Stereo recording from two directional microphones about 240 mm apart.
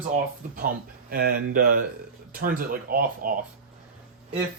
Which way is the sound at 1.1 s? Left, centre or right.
Right.